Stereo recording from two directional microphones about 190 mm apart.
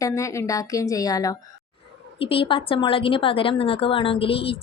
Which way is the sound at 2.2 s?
30° left (ahead or behind).